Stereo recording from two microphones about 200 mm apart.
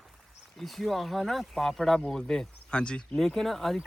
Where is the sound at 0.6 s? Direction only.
Centre (ahead or behind).